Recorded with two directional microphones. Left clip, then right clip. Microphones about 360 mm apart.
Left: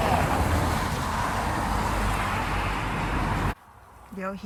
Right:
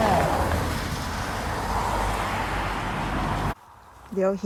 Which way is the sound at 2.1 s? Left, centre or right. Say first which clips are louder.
Right 1 dB; right.